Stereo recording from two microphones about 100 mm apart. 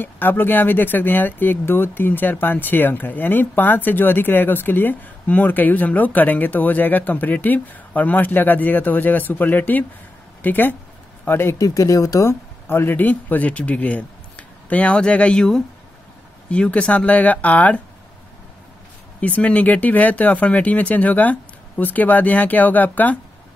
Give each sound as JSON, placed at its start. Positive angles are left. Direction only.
{"t": 0.0, "sound": "speech", "side_deg": 20}
{"t": 19.2, "sound": "speech", "side_deg": 15}